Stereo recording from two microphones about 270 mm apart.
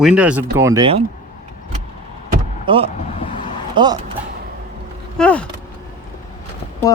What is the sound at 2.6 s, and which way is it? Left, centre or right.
Speech, centre.